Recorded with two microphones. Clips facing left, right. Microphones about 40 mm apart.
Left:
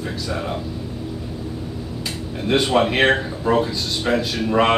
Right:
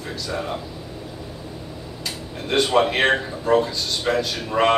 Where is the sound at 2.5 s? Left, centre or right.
Centre.